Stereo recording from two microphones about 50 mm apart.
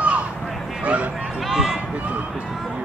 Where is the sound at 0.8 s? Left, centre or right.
Right.